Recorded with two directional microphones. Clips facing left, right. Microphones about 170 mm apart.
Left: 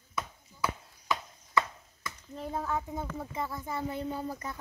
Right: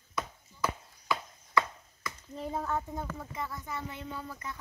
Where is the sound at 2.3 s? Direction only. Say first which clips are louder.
Even; centre (ahead or behind).